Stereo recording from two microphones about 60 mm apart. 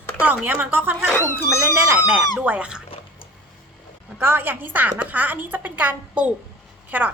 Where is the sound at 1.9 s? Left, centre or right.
Right.